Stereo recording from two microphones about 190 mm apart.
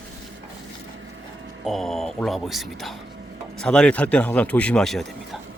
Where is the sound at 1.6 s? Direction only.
Centre (ahead or behind).